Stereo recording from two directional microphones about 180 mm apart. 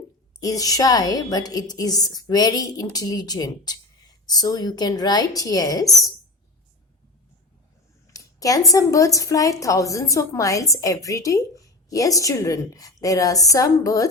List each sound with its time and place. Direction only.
0.3 s a woman's voice: 20° left (ahead or behind)
8.0 s a sound: 20° left (ahead or behind)
8.7 s a woman's voice: 20° left (ahead or behind)